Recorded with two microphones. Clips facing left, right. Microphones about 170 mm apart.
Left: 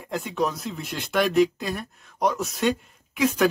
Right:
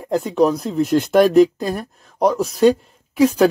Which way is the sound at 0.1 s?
35° right (ahead or behind).